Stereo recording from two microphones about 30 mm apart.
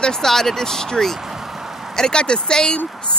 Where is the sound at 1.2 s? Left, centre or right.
Centre.